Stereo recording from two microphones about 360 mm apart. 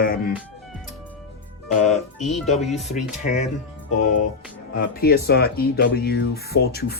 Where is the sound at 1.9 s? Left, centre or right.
Centre.